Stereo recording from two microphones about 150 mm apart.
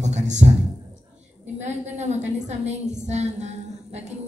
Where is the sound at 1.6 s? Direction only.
50° right (ahead or behind).